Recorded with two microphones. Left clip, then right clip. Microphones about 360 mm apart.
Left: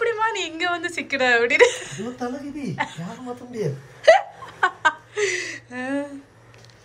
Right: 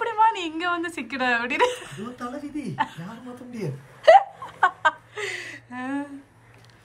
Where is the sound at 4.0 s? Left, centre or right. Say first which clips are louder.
Right 1 dB; centre.